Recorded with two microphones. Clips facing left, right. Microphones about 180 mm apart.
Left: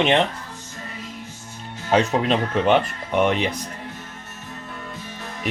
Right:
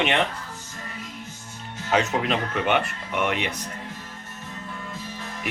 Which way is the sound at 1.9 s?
30° left (ahead or behind).